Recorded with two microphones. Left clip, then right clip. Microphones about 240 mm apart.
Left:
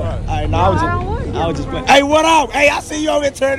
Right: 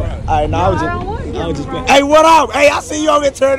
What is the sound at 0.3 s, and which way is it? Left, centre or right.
A man's voice, centre.